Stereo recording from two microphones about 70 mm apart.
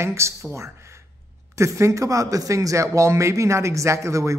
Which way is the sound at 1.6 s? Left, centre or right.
Right.